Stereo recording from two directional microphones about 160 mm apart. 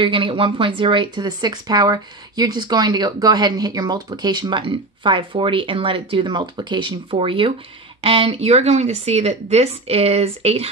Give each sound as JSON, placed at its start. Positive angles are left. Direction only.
{"t": 0.0, "sound": "speech", "side_deg": -30}